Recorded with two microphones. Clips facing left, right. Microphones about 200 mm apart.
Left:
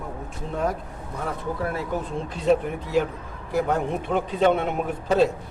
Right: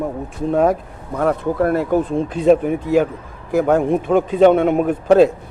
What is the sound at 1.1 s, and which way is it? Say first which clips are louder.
A man's voice: right 11 dB; 65° right (ahead or behind).